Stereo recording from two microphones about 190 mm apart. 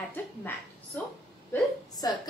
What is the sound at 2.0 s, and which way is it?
Speech, 20° left (ahead or behind).